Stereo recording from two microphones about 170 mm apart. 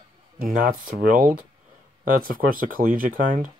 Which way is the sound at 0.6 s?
55° right (ahead or behind).